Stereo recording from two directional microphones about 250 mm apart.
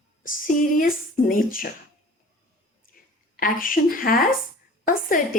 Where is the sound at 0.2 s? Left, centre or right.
Left.